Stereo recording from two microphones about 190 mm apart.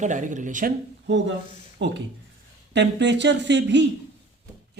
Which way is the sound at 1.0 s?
70° right (ahead or behind).